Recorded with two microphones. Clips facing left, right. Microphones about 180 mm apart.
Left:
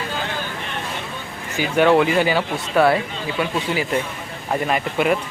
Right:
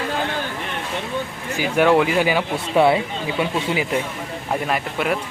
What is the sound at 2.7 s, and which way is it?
Speech, 20° right (ahead or behind).